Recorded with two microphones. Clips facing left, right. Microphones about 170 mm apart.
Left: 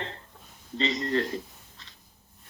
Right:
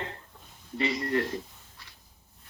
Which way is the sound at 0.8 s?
20° left (ahead or behind).